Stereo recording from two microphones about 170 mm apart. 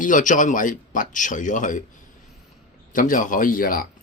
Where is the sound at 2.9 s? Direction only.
50° left (ahead or behind).